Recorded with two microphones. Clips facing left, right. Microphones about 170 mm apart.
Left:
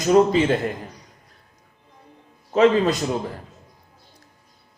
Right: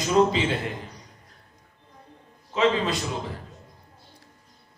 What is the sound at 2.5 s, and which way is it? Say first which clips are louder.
Speech: left 6 dB; 45° left (ahead or behind).